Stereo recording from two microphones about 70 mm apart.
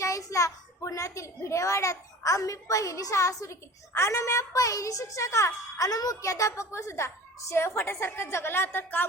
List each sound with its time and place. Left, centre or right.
0.0 s a child's voice: left
5.7 s a woman's voice: left